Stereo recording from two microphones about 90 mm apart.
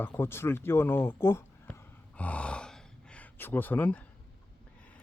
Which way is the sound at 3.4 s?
20° left (ahead or behind).